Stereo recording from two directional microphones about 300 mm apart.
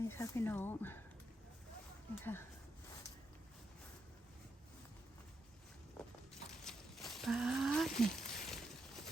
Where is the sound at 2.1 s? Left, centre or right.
Centre.